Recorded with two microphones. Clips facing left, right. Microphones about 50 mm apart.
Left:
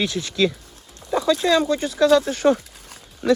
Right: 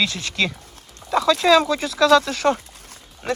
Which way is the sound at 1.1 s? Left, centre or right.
Right.